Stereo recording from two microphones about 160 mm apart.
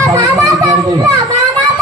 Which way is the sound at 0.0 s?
20° right (ahead or behind).